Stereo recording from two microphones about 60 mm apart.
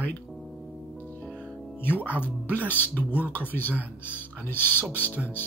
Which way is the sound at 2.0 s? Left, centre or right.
Left.